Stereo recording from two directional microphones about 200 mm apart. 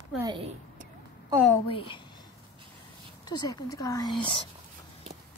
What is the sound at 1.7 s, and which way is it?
Speech, 25° left (ahead or behind).